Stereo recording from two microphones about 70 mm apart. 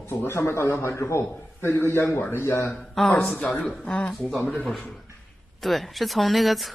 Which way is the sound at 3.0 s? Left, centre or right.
Centre.